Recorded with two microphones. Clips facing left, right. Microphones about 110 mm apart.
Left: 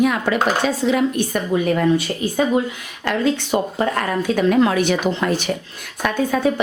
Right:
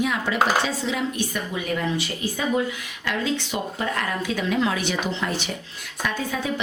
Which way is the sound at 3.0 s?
50° left (ahead or behind).